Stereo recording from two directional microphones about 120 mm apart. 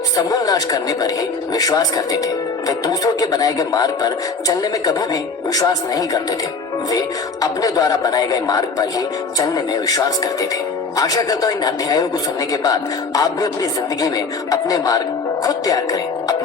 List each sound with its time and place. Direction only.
0.2 s speech: 30° left (ahead or behind)
7.4 s speech: 30° left (ahead or behind)